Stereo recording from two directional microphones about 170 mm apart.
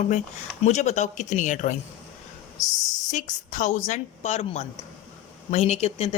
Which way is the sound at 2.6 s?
20° left (ahead or behind).